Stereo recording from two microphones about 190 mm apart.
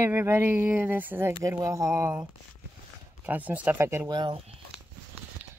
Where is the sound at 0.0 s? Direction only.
15° right (ahead or behind).